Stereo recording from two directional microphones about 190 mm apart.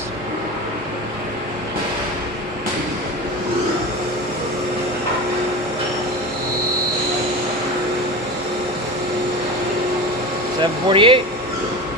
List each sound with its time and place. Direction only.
10.6 s speech: 25° right (ahead or behind)